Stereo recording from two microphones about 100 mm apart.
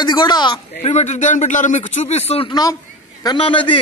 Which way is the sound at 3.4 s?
60° left (ahead or behind).